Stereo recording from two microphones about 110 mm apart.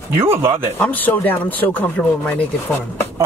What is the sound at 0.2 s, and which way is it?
Speech, 20° right (ahead or behind).